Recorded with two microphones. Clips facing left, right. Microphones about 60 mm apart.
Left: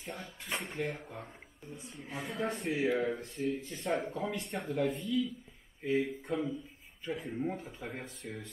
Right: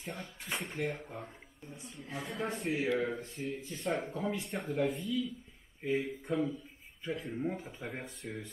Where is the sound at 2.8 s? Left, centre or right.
Left.